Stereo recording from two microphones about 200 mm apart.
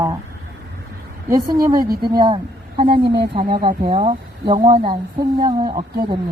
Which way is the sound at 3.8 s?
30° right (ahead or behind).